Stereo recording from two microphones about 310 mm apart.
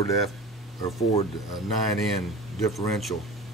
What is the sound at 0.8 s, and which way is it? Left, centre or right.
Speech, centre.